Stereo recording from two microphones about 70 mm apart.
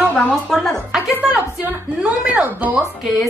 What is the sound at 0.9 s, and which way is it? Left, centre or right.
A woman's voice, centre.